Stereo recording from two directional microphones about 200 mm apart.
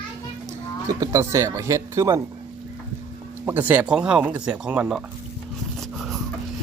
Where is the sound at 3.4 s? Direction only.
10° right (ahead or behind).